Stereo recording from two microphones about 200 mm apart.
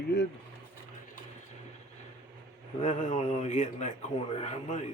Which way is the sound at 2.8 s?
40° left (ahead or behind).